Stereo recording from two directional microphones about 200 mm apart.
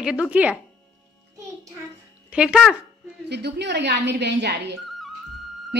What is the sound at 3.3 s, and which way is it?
Speech, 55° right (ahead or behind).